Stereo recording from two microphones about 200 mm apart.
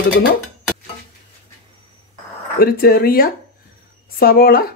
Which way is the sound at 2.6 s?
50° left (ahead or behind).